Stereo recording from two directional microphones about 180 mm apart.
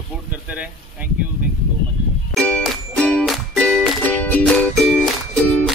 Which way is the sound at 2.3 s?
5° left (ahead or behind).